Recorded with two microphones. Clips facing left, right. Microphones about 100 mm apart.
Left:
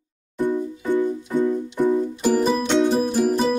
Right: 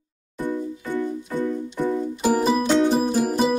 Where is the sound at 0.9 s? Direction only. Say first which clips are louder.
Left 5 dB; 15° left (ahead or behind).